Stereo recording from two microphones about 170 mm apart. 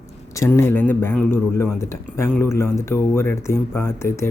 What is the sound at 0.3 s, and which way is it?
A man's voice, 15° left (ahead or behind).